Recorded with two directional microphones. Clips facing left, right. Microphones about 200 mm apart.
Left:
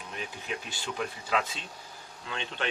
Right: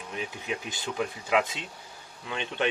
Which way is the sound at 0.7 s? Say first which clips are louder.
Right 3 dB; 15° right (ahead or behind).